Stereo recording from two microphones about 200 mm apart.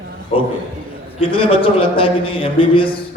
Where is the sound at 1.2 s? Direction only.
25° left (ahead or behind).